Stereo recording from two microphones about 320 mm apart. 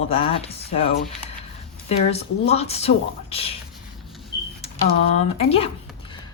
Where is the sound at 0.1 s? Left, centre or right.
Centre.